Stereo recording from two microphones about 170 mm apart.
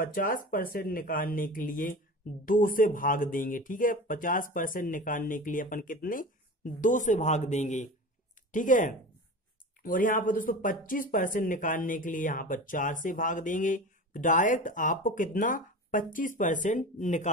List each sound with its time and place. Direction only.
0.0 s speech: 55° left (ahead or behind)